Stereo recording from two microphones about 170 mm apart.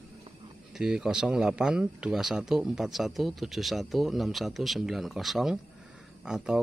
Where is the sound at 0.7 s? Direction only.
5° right (ahead or behind).